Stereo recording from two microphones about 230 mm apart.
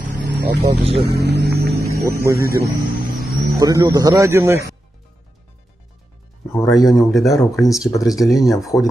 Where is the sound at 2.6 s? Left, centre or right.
Right.